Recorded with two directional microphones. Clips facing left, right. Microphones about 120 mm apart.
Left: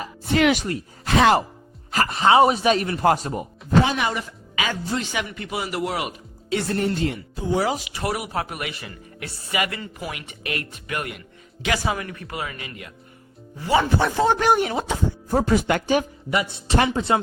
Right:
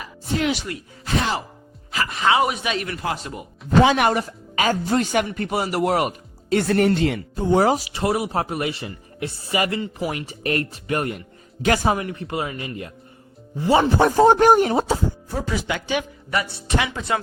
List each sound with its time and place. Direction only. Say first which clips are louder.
0.5 s speech: left 3 dB; 35° left (ahead or behind)
1.0 s speech: left 7 dB; 80° left
1.9 s speech: left 3 dB; 40° left (ahead or behind)
3.8 s speech: right 6 dB; 60° right (ahead or behind)
4.2 s speech: right 5 dB; 40° right (ahead or behind)
6.7 s speech: right 5 dB; 80° right
7.3 s speech: right 6 dB; 50° right (ahead or behind)
11.9 s speech: right 5 dB; 25° right (ahead or behind)
14.0 s speech: right 6 dB; 45° right (ahead or behind)
15.3 s speech: left 10 dB; 50° left (ahead or behind)
16.3 s speech: left 1 dB; 20° left (ahead or behind)